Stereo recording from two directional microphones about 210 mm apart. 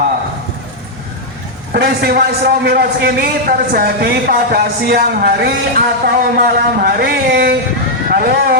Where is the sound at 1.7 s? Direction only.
50° right (ahead or behind).